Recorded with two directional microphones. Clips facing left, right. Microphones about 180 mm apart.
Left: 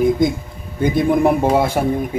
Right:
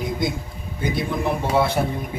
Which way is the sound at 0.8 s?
50° left (ahead or behind).